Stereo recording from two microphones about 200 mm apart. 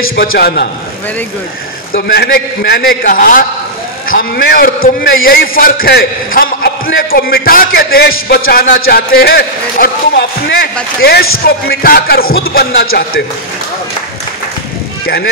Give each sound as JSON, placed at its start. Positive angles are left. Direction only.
{"t": 0.1, "sound": "a man's voice", "side_deg": 50}
{"t": 2.0, "sound": "a man's voice", "side_deg": 60}